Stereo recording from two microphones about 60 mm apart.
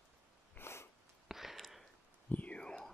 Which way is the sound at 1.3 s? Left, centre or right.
Centre.